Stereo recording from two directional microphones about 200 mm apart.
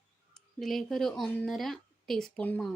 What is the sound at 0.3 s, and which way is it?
Speech, centre (ahead or behind).